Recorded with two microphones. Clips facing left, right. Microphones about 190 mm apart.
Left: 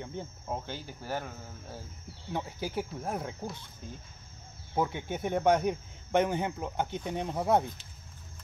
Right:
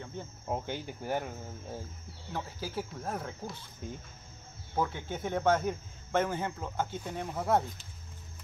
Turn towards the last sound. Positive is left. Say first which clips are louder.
# left 2 dB
turn(degrees=20)  # may be behind; listen again after turning